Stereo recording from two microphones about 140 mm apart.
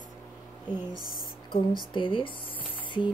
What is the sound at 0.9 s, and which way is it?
Speech, 30° right (ahead or behind).